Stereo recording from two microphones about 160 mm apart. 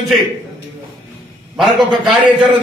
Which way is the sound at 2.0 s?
Centre (ahead or behind).